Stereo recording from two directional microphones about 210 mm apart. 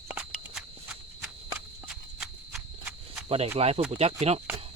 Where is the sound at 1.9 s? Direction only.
5° right (ahead or behind).